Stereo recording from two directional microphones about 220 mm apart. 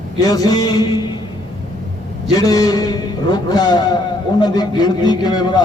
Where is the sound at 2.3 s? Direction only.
15° left (ahead or behind).